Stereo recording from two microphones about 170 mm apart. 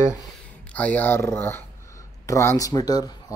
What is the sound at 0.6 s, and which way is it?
Speech, 10° left (ahead or behind).